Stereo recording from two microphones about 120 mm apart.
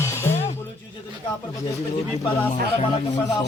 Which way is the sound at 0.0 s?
20° left (ahead or behind).